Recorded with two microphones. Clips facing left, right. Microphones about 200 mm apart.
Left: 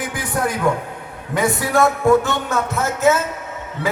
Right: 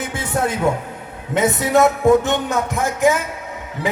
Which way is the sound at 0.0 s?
25° right (ahead or behind).